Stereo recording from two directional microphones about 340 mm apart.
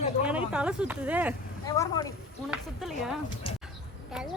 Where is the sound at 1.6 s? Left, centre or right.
Centre.